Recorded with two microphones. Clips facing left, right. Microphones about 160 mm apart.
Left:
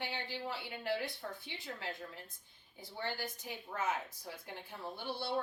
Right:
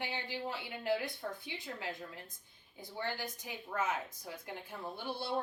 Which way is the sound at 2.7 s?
50° right (ahead or behind).